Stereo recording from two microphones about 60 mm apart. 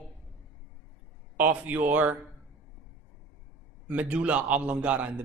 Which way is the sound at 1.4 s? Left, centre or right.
Right.